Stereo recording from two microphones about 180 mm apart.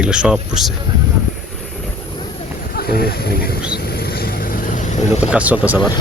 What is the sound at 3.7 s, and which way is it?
Vehicle, 60° left (ahead or behind).